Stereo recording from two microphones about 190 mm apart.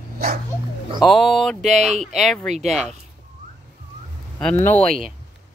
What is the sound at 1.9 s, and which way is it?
Speech, 35° right (ahead or behind).